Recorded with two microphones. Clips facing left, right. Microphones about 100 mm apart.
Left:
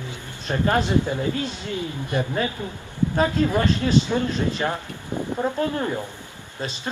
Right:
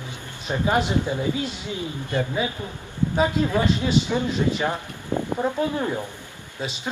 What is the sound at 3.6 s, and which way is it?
A man's voice, 10° right (ahead or behind).